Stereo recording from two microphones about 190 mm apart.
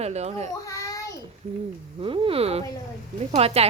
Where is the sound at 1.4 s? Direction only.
40° right (ahead or behind).